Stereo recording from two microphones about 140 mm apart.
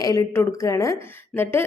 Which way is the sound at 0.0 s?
25° left (ahead or behind).